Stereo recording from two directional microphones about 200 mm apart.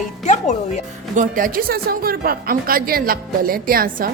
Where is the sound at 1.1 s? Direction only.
45° right (ahead or behind).